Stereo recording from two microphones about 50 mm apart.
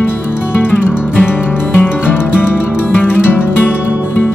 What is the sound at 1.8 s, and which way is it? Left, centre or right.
Music, left.